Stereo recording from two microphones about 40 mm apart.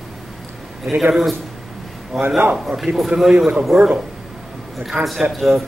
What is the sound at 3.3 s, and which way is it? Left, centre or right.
Speech, right.